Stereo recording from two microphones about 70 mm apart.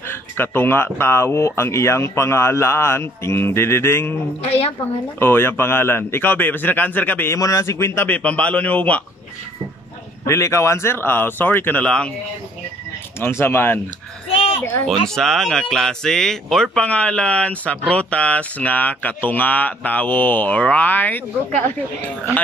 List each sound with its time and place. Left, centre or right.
0.1 s speech: left
5.2 s speech: left
7.3 s speech: left
7.6 s speech: left
8.1 s speech: centre
10.2 s speech: left
11.8 s speech: centre
13.2 s speech: left
14.9 s speech: centre
16.8 s speech: centre